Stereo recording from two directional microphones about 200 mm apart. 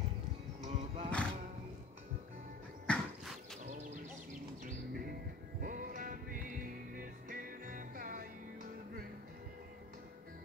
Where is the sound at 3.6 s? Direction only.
40° right (ahead or behind).